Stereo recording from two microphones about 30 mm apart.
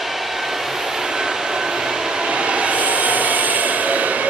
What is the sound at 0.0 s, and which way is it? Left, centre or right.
Vehicle, centre.